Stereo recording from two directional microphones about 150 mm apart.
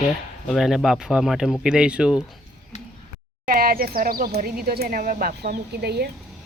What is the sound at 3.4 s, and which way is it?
Speech, 75° right (ahead or behind).